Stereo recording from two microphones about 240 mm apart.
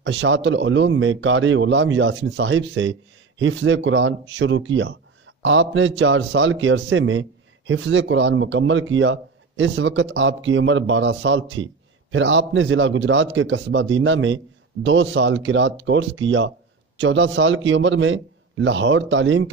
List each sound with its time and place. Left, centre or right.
0.0 s a man's voice: right